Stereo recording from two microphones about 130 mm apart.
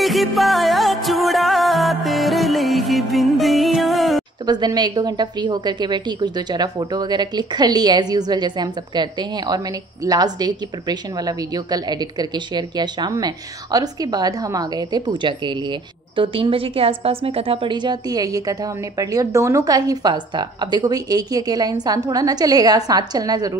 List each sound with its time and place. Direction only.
0.0 s music: centre (ahead or behind)
4.5 s a woman's voice: 30° right (ahead or behind)